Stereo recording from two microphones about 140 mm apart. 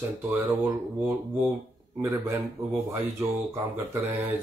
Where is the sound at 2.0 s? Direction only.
20° right (ahead or behind).